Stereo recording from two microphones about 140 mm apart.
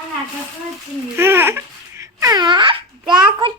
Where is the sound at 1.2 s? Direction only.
15° right (ahead or behind).